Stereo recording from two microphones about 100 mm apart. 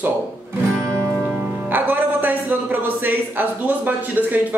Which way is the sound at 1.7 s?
20° right (ahead or behind).